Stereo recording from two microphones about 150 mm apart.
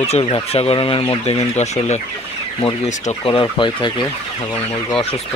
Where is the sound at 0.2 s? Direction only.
40° left (ahead or behind).